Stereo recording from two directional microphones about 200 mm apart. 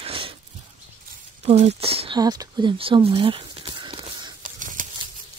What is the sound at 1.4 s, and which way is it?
Speech, 30° right (ahead or behind).